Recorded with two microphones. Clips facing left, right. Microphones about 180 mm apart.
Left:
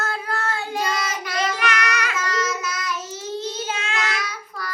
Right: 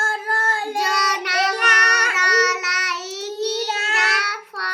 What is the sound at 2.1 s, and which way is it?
Child singing, 75° right (ahead or behind).